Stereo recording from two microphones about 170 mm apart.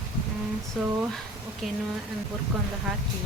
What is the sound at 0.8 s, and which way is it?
Speech, centre (ahead or behind).